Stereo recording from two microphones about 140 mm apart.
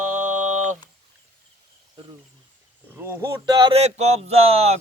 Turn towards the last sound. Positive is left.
turn(degrees=-45)  # may be behind; listen again after turning